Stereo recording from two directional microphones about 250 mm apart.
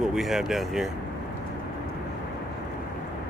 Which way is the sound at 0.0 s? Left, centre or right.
Centre.